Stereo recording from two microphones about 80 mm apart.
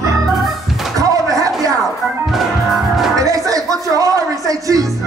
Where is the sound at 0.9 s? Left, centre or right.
Right.